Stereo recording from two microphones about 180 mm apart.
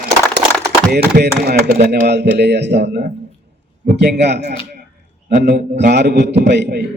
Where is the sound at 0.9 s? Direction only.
65° right (ahead or behind).